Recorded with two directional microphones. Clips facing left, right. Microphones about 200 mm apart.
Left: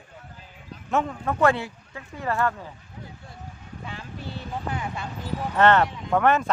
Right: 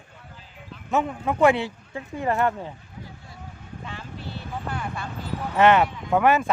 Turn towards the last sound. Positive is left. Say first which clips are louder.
# right 1 dB
turn(degrees=-10)  # may be behind; listen again after turning